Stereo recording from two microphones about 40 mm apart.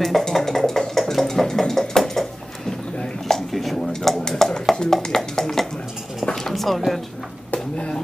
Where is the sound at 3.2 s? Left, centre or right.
Centre.